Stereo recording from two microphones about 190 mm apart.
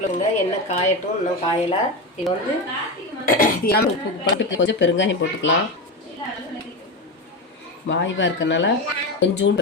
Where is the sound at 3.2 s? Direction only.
45° left (ahead or behind).